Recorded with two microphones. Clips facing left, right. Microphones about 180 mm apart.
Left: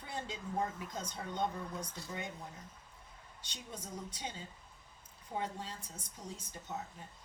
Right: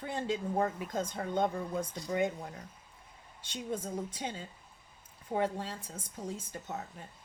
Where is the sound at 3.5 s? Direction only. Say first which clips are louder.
Right 10 dB; 55° right (ahead or behind).